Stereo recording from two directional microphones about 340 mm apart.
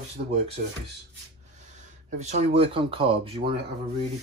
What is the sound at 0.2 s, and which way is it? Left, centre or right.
Speech, right.